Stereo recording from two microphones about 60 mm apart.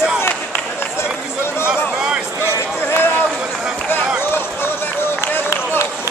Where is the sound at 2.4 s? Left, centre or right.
Left.